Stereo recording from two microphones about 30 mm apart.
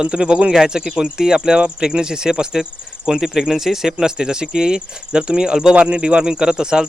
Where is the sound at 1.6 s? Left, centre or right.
Right.